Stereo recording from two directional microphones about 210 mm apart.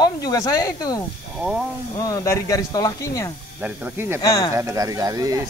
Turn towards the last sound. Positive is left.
turn(degrees=-15)  # may be behind; listen again after turning